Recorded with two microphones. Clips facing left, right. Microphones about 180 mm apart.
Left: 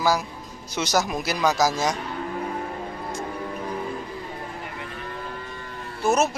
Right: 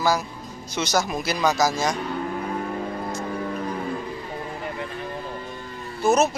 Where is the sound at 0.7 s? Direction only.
Centre (ahead or behind).